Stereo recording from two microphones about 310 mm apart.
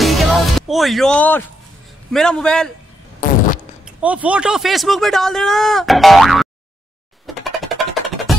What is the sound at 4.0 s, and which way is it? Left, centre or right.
Speech, centre.